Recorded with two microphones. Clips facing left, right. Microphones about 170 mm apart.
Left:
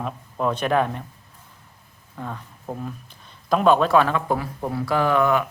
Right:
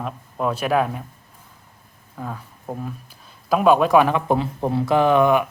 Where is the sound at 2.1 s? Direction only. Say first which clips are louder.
Right 1 dB; 5° right (ahead or behind).